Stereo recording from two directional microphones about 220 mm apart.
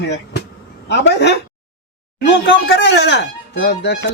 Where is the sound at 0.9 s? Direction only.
50° left (ahead or behind).